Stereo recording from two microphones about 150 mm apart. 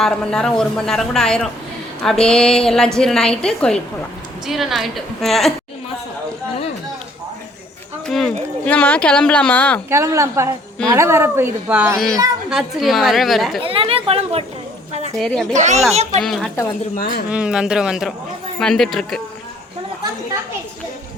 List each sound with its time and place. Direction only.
0.0 s a woman's voice: 5° left (ahead or behind)
8.0 s speech: 5° left (ahead or behind)
9.9 s a woman's voice: 20° right (ahead or behind); by 13.6 s centre (ahead or behind)
13.6 s speech: 35° right (ahead or behind)
15.2 s a woman's voice: centre (ahead or behind)
15.5 s speech: 50° right (ahead or behind)
16.2 s a woman's voice: 5° left (ahead or behind)
16.9 s speech: 75° left (ahead or behind)
17.2 s a woman's voice: 5° right (ahead or behind)